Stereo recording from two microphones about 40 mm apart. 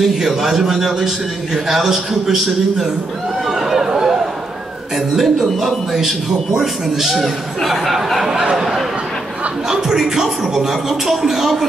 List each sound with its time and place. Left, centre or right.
0.0 s a man's voice: centre
3.4 s chatter: centre
4.9 s a man's voice: centre
8.2 s a sound: centre
9.7 s a man's voice: centre